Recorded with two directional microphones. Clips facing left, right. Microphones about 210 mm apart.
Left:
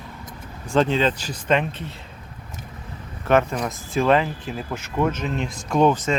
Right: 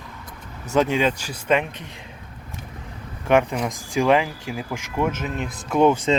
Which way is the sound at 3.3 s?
15° right (ahead or behind).